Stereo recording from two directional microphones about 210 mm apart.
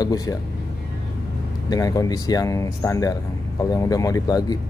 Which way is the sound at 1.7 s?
15° left (ahead or behind).